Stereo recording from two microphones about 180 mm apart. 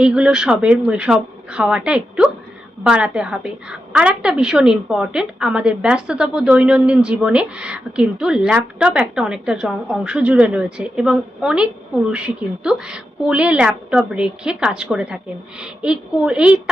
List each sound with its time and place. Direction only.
0.0 s a woman's voice: 5° right (ahead or behind)